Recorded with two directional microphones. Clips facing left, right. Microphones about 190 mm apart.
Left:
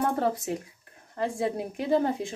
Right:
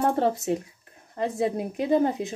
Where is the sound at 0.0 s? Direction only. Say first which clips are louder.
Right 3 dB; 25° right (ahead or behind).